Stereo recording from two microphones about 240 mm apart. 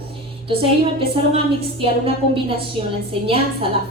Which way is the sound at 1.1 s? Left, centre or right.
Right.